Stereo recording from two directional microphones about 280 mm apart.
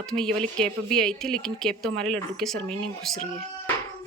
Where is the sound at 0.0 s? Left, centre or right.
Centre.